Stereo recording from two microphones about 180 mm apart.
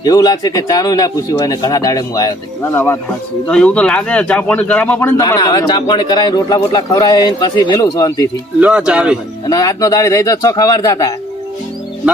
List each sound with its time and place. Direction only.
0.0 s speech: 20° left (ahead or behind)
8.6 s speech: 5° right (ahead or behind)
9.5 s speech: 20° left (ahead or behind)